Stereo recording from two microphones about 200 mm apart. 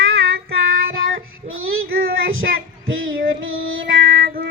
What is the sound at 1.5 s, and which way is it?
Child singing, 90° right.